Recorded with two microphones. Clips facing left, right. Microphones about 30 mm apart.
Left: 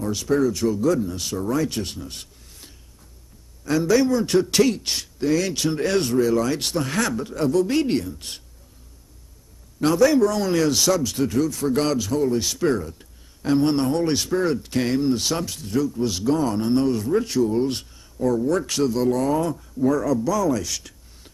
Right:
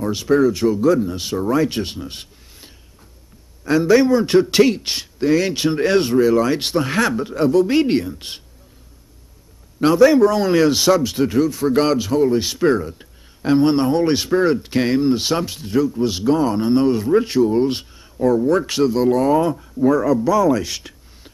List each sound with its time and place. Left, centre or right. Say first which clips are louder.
0.0 s a man's voice: right 5 dB; right
9.8 s a man's voice: right 5 dB; right